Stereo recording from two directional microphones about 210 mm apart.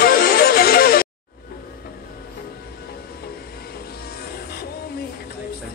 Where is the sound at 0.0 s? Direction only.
45° left (ahead or behind).